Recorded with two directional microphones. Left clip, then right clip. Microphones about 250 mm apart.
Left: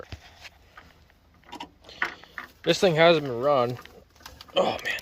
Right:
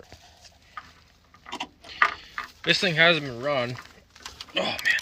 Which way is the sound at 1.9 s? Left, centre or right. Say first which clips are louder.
Right 8 dB; centre.